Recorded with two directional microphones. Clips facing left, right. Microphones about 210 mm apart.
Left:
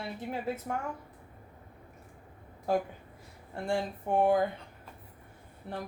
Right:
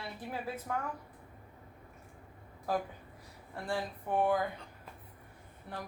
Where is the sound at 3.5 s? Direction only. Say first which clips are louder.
Left 5 dB; 25° left (ahead or behind).